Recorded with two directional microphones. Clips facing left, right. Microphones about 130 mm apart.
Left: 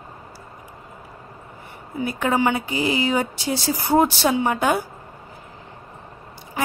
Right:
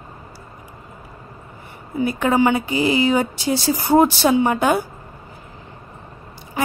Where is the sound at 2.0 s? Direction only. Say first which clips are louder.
Right 4 dB; 30° right (ahead or behind).